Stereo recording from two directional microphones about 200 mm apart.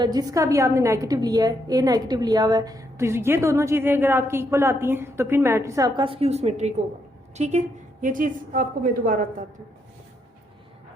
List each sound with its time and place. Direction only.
0.0 s a woman's voice: 20° right (ahead or behind)
6.0 s a woman's voice: 25° right (ahead or behind)